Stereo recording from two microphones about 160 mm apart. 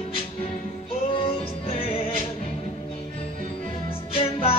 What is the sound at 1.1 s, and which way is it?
Music, 35° left (ahead or behind).